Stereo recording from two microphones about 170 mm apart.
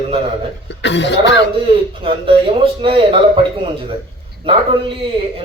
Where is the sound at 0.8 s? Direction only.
90° left.